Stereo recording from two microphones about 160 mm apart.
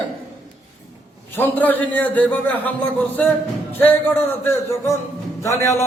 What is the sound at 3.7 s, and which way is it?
A man's voice, 15° left (ahead or behind).